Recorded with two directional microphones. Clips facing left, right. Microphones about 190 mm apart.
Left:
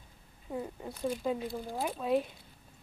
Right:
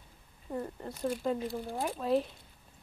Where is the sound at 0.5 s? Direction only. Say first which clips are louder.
Right 1 dB; 5° left (ahead or behind).